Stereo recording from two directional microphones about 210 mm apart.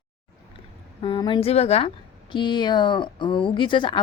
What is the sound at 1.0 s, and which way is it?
Speech, 20° left (ahead or behind).